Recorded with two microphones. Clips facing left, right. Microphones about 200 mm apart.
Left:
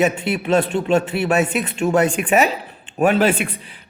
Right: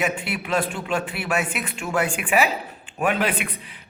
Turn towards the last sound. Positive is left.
turn(degrees=30)  # may be behind; listen again after turning